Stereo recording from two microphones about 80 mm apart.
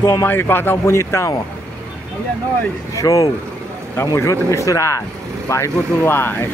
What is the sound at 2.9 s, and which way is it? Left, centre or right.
Speech, left.